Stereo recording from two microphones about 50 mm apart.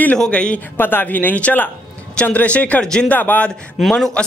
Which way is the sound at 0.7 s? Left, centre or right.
Left.